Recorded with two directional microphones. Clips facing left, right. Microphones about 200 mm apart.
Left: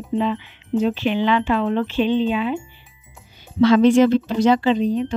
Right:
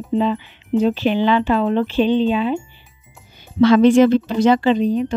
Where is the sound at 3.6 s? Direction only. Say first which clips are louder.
Right 2 dB; 55° right (ahead or behind).